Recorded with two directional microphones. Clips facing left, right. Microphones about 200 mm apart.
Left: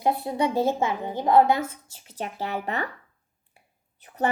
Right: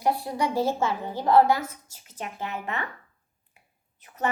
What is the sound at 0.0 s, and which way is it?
A woman's voice, 20° left (ahead or behind).